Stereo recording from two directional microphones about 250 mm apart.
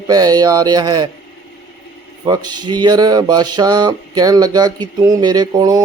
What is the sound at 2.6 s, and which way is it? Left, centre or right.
Mantra, centre.